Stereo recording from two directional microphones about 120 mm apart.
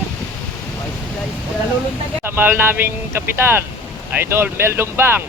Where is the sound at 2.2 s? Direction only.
20° right (ahead or behind).